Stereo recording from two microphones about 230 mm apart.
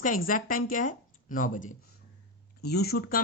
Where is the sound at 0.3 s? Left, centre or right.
Left.